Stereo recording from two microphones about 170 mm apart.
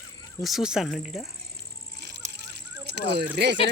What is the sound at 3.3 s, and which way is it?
Speech, 85° right.